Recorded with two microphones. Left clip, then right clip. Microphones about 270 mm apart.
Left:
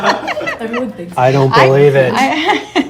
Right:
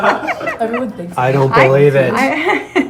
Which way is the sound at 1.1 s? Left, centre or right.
Left.